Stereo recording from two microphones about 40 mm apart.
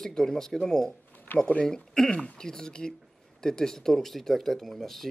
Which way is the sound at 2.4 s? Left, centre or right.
Centre.